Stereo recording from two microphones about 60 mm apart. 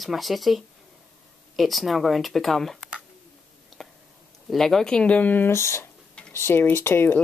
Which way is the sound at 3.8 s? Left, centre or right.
Centre.